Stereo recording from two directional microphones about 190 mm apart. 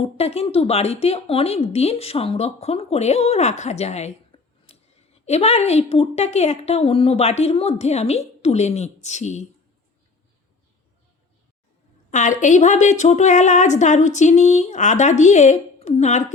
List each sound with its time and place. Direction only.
0.0 s speech: 30° left (ahead or behind)
12.1 s speech: 40° left (ahead or behind)